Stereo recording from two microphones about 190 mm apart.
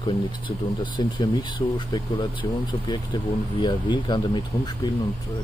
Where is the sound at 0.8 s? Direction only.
25° left (ahead or behind).